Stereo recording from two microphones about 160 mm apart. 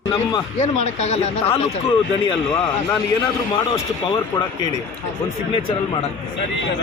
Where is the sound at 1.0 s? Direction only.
40° left (ahead or behind).